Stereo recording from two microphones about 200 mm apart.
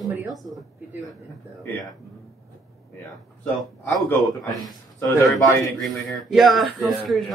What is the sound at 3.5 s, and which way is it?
Speech, 5° left (ahead or behind).